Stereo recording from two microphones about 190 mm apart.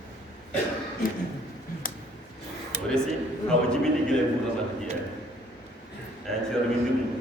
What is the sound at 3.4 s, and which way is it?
Speech, 5° left (ahead or behind).